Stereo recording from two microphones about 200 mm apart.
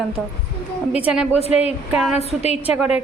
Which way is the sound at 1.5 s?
30° left (ahead or behind).